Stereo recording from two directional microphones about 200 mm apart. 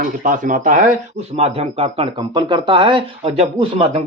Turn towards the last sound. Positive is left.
turn(degrees=-30)  # may be behind; listen again after turning